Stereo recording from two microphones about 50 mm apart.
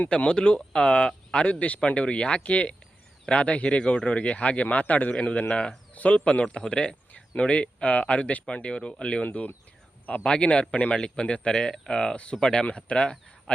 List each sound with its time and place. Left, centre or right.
0.1 s speech: centre